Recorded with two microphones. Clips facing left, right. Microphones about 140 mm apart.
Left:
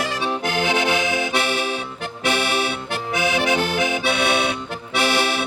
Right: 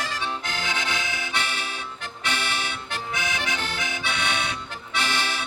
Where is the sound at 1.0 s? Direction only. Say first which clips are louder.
Left 9 dB; 15° left (ahead or behind).